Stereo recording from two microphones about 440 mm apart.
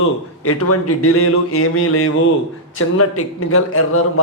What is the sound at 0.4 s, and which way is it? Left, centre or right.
A man's voice, left.